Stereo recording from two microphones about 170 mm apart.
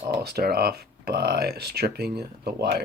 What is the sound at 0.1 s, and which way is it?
Speech, 70° right (ahead or behind).